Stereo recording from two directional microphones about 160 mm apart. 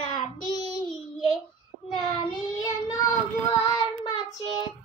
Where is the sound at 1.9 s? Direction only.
25° left (ahead or behind).